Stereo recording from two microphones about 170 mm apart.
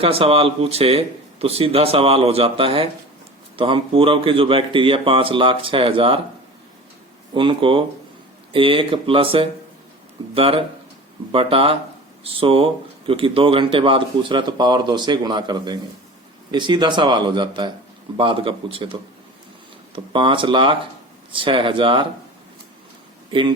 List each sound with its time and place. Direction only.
0.0 s speech: 35° right (ahead or behind)
7.3 s speech: 30° right (ahead or behind)
20.1 s speech: 30° right (ahead or behind)
23.3 s speech: 30° right (ahead or behind)